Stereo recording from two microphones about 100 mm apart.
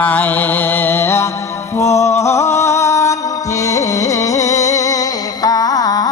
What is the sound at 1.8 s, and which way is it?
Music, 30° left (ahead or behind).